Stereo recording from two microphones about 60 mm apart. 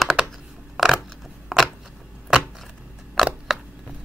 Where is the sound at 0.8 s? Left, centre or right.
Centre.